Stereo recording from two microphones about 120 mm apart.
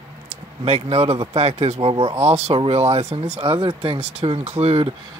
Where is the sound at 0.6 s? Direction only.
55° right (ahead or behind).